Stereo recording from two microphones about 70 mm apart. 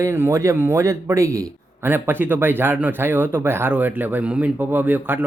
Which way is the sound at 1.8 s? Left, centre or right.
Right.